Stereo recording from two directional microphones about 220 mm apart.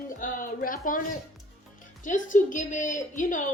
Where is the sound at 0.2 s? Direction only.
40° left (ahead or behind).